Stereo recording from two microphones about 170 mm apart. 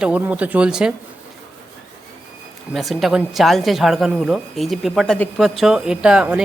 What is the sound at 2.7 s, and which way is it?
Speech, centre (ahead or behind).